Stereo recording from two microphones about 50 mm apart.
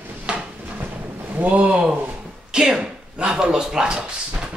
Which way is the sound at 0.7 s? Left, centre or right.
Right.